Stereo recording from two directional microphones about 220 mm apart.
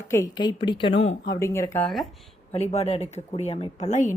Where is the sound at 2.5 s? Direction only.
30° left (ahead or behind).